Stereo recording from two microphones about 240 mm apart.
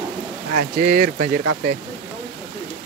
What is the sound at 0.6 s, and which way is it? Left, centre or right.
Speech, right.